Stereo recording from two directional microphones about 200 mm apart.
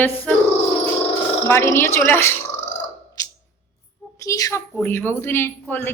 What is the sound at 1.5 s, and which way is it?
Speech, 10° left (ahead or behind).